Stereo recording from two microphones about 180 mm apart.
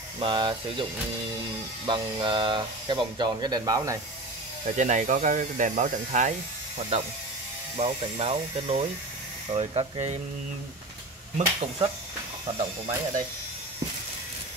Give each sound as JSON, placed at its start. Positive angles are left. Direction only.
{"t": 0.2, "sound": "speech", "side_deg": -25}
{"t": 1.9, "sound": "speech", "side_deg": -25}
{"t": 4.6, "sound": "speech", "side_deg": -40}
{"t": 7.7, "sound": "speech", "side_deg": -35}
{"t": 11.3, "sound": "speech", "side_deg": -30}